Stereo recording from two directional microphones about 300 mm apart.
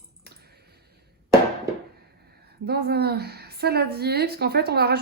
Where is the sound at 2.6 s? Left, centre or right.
Right.